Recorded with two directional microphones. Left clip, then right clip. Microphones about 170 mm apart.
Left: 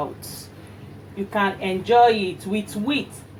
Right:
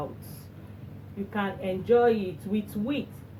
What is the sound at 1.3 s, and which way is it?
Speech, 30° left (ahead or behind).